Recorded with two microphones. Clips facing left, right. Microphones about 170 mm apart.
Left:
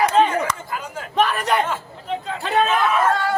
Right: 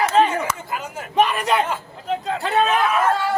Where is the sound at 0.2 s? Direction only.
Centre (ahead or behind).